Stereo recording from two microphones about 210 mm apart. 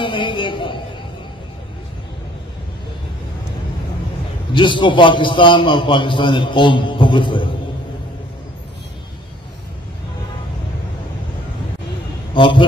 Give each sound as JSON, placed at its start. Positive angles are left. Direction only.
{"t": 0.0, "sound": "a sound", "side_deg": 25}
{"t": 4.6, "sound": "a man's voice", "side_deg": 25}
{"t": 12.4, "sound": "a man's voice", "side_deg": 25}